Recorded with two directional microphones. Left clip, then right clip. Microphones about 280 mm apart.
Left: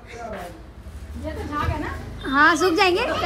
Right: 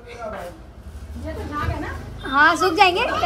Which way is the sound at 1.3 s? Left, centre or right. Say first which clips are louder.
Left 1 dB; centre.